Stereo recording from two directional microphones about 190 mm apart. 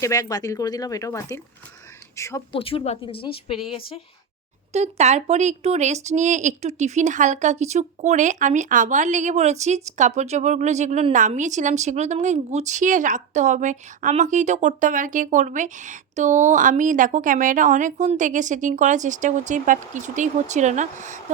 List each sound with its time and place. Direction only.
0.0 s speech: 20° left (ahead or behind)
2.5 s speech: 30° left (ahead or behind)
4.7 s speech: 35° right (ahead or behind)